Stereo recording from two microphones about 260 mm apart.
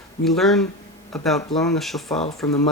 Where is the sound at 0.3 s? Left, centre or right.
Centre.